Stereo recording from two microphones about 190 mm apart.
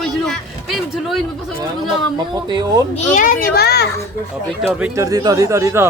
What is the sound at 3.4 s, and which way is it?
Speech, 55° left (ahead or behind).